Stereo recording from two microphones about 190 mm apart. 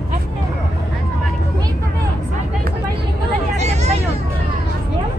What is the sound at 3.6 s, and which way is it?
Hubbub, 35° right (ahead or behind).